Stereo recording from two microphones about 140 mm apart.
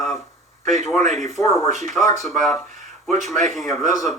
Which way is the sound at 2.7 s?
60° right (ahead or behind).